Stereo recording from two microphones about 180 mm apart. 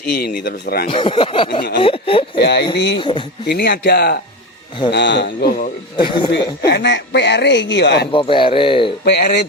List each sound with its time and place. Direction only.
0.0 s speech: 60° left (ahead or behind)
0.9 s speech: 30° left (ahead or behind)
2.4 s speech: 70° left (ahead or behind)
2.7 s speech: 80° left
3.0 s speech: 25° left (ahead or behind)
3.4 s speech: 65° left (ahead or behind)
4.9 s speech: 75° left (ahead or behind)
6.0 s speech: 25° left (ahead or behind)
6.7 s speech: 75° left (ahead or behind)
8.1 s speech: 30° left (ahead or behind)
9.0 s speech: 65° left (ahead or behind)